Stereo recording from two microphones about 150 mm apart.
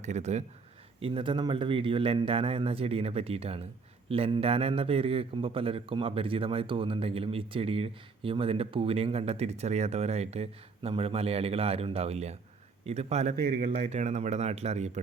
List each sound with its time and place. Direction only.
0.0 s speech: 50° right (ahead or behind)
1.0 s a man's voice: 35° right (ahead or behind)
13.4 s speech: 85° right
13.7 s speech: 40° right (ahead or behind)